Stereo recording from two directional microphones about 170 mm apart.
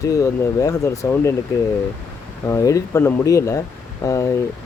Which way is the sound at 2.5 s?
20° left (ahead or behind).